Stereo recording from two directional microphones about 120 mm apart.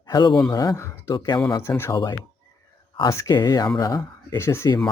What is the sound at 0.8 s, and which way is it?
Speech, 20° left (ahead or behind).